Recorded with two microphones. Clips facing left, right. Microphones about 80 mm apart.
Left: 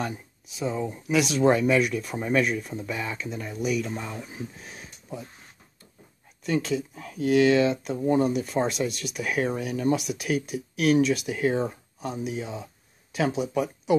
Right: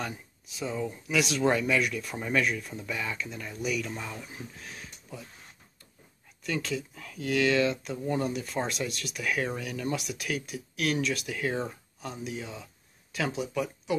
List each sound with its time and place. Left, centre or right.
0.7 s speech: centre
6.4 s speech: centre
7.9 s speech: left
8.5 s speech: centre
9.9 s speech: centre